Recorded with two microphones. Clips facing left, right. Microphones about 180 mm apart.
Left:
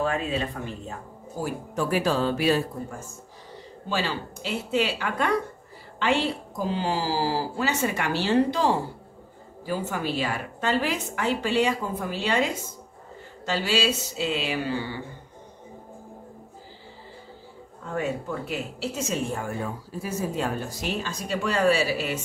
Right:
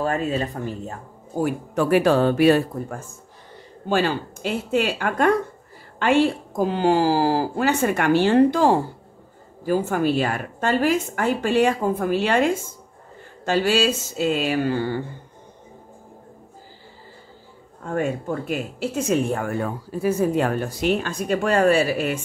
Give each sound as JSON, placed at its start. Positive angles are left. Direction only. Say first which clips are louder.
{"t": 0.0, "sound": "a woman's voice", "louder": "right 3 dB", "side_deg": -45}
{"t": 1.4, "sound": "a woman's voice", "louder": "right 6 dB", "side_deg": -65}
{"t": 17.8, "sound": "speech", "louder": "right 5 dB", "side_deg": -50}